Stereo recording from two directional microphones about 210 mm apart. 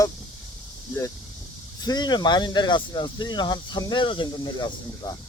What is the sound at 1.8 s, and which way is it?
Speech, 20° left (ahead or behind).